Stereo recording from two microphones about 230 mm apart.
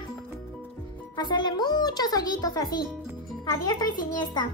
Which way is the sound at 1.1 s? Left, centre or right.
Centre.